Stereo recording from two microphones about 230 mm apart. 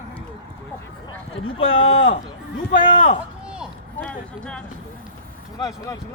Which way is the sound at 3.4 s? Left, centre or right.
Centre.